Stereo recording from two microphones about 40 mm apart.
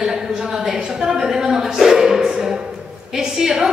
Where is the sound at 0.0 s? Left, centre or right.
Centre.